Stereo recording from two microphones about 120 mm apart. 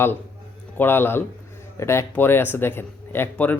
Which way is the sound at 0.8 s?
20° left (ahead or behind).